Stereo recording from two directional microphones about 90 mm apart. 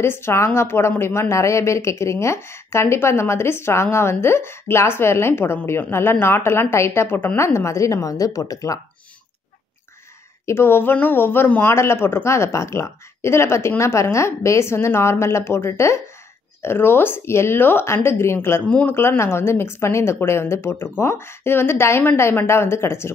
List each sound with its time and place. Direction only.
0.0 s a woman's voice: 30° left (ahead or behind)
10.4 s a woman's voice: 25° left (ahead or behind)